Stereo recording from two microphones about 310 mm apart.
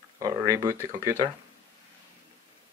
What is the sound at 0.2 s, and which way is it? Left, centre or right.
Speech, centre.